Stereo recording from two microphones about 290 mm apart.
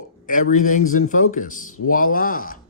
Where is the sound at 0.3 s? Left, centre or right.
Left.